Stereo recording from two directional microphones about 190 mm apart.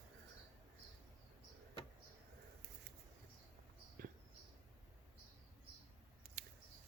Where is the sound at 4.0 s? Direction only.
50° right (ahead or behind).